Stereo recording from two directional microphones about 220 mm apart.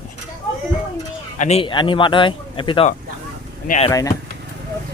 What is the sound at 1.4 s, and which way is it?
Speech, 25° left (ahead or behind).